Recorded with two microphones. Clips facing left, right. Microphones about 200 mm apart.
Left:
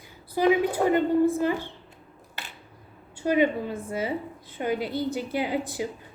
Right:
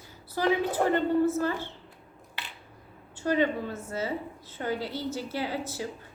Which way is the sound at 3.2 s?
15° left (ahead or behind).